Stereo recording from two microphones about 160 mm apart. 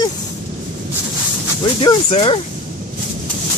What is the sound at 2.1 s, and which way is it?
Speech, 35° left (ahead or behind).